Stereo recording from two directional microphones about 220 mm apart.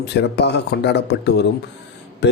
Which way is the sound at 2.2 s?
50° left (ahead or behind).